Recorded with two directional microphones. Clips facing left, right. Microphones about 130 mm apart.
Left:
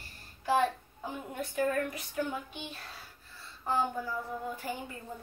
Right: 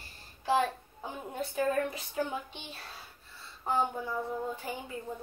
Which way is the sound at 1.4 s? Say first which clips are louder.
Right 1 dB; 25° right (ahead or behind).